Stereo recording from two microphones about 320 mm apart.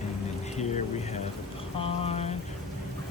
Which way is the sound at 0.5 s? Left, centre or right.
Left.